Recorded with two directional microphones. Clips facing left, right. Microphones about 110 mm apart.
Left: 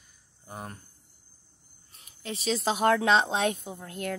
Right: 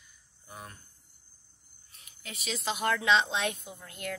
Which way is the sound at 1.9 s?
35° left (ahead or behind).